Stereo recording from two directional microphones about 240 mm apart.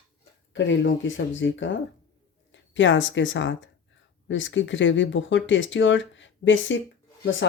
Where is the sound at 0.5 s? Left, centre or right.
Left.